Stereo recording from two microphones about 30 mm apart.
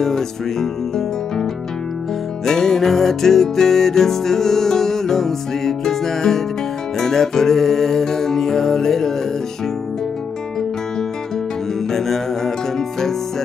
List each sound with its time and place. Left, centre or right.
0.0 s music: centre
11.9 s music: centre